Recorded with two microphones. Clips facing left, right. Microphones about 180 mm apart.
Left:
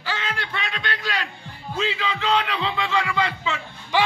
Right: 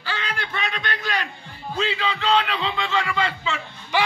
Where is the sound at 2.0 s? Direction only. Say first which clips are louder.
Right 2 dB; 30° right (ahead or behind).